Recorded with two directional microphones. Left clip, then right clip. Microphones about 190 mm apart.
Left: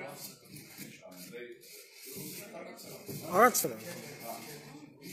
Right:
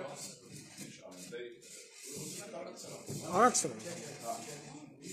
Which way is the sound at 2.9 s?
5° left (ahead or behind).